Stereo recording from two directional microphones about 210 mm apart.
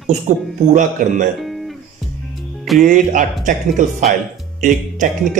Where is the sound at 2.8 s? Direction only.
40° right (ahead or behind).